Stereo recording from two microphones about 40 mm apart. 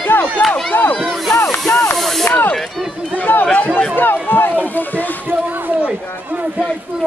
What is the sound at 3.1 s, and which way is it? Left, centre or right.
Speech, left.